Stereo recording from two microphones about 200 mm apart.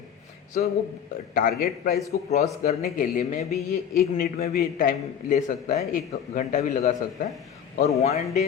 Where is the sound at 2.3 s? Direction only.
35° left (ahead or behind).